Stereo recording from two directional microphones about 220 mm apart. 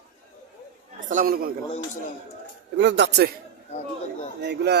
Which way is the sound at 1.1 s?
40° right (ahead or behind).